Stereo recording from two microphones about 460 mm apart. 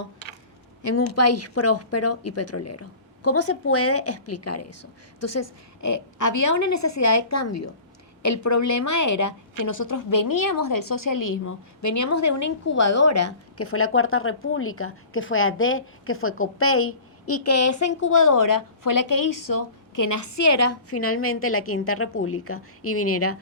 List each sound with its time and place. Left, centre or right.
0.8 s a woman's voice: left